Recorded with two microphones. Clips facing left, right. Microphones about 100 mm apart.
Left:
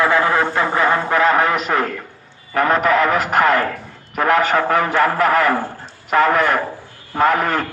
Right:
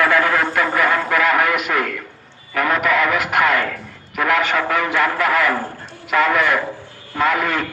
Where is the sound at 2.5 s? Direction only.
35° left (ahead or behind).